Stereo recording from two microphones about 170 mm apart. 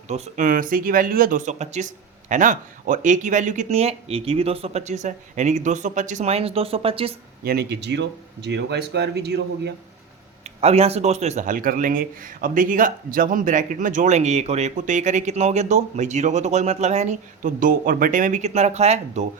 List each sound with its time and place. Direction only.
0.1 s speech: 50° right (ahead or behind); by 7.1 s 35° right (ahead or behind)
7.4 s speech: 70° right (ahead or behind)
10.6 s speech: 35° right (ahead or behind)